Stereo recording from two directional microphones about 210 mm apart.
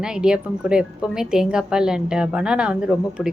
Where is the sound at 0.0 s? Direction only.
5° right (ahead or behind).